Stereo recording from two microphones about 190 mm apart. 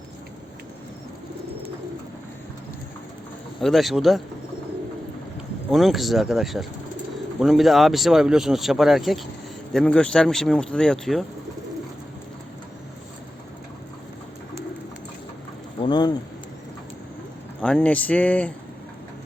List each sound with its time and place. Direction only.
3.6 s speech: centre (ahead or behind)
5.7 s speech: centre (ahead or behind)
15.8 s speech: 25° left (ahead or behind)
17.6 s speech: 5° left (ahead or behind)